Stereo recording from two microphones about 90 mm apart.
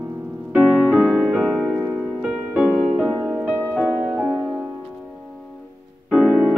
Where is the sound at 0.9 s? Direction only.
15° right (ahead or behind).